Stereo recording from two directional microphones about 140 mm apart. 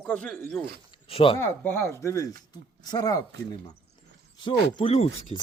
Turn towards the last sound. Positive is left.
turn(degrees=45)  # may be behind; listen again after turning